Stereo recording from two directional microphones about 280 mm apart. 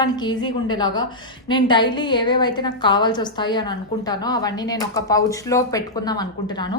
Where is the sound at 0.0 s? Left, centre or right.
Centre.